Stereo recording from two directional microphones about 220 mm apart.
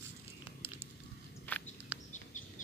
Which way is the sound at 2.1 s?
35° left (ahead or behind).